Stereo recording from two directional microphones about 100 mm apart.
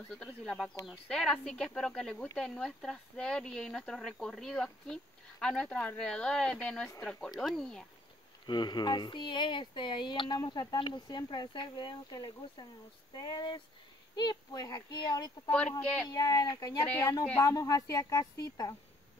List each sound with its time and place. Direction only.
0.2 s speech: 5° left (ahead or behind)
8.5 s a woman's voice: 45° left (ahead or behind)